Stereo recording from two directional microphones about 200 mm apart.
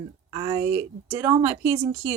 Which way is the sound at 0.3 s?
20° right (ahead or behind).